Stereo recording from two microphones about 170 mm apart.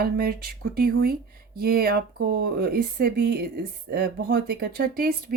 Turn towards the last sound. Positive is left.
turn(degrees=-60)  # may be behind; listen again after turning